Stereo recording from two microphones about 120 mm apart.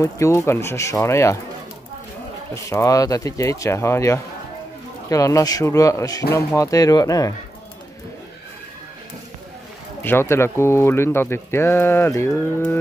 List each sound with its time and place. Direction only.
0.0 s speech: 25° left (ahead or behind)
2.5 s speech: 25° left (ahead or behind)
10.0 s speech: 20° left (ahead or behind)